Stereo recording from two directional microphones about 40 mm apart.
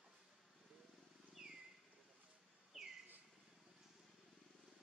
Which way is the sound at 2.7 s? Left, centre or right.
Centre.